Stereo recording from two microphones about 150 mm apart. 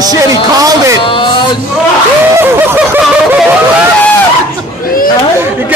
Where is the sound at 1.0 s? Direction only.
35° left (ahead or behind).